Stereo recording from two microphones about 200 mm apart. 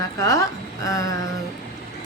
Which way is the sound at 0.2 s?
15° left (ahead or behind).